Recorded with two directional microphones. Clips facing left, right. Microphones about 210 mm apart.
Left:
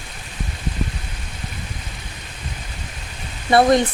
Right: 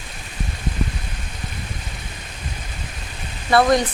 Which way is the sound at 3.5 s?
25° left (ahead or behind).